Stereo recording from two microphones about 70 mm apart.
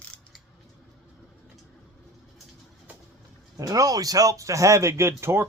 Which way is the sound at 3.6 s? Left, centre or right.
Right.